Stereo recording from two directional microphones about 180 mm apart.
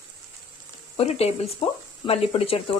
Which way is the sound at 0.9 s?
35° left (ahead or behind).